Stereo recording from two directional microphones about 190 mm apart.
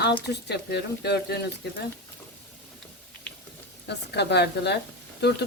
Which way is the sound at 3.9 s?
60° left (ahead or behind).